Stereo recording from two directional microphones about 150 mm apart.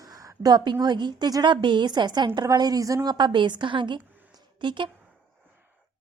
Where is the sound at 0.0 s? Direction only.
25° right (ahead or behind).